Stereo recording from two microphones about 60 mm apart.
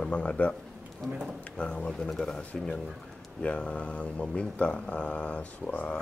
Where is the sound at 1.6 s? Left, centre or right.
Centre.